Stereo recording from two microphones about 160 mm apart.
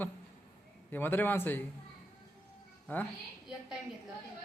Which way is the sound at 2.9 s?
10° left (ahead or behind).